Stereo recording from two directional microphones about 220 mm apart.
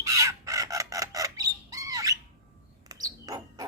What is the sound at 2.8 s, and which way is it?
Bird, 15° right (ahead or behind).